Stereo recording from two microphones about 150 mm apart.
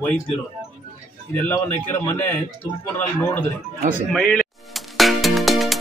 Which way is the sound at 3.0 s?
10° left (ahead or behind).